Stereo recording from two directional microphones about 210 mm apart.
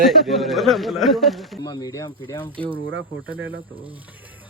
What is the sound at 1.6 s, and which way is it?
Speech, 20° left (ahead or behind).